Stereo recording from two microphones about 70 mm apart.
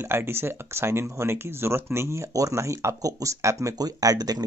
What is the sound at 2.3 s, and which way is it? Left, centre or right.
Speech, right.